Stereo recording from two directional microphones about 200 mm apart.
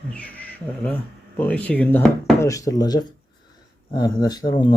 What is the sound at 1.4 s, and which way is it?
Speech, 5° left (ahead or behind).